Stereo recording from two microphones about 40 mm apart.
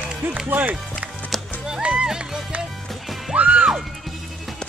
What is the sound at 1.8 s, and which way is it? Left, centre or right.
Music, right.